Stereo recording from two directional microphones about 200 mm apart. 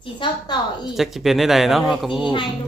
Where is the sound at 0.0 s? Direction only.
25° left (ahead or behind).